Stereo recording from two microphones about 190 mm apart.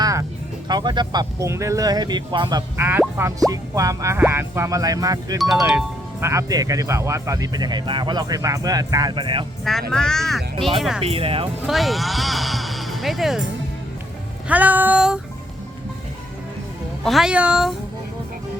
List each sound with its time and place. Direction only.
0.0 s music: 15° right (ahead or behind)
0.7 s speech: 25° right (ahead or behind)
5.4 s speech: centre (ahead or behind); by 9.5 s 25° right (ahead or behind)
9.9 s speech: 5° left (ahead or behind)
11.0 s speech: 30° right (ahead or behind)
11.6 s speech: centre (ahead or behind)
14.4 s speech: 10° right (ahead or behind)
17.0 s speech: centre (ahead or behind)